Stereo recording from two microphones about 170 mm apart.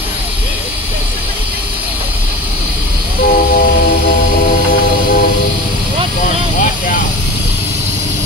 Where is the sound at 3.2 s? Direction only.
60° left (ahead or behind).